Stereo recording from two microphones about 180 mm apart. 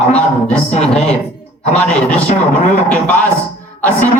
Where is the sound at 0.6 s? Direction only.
35° left (ahead or behind).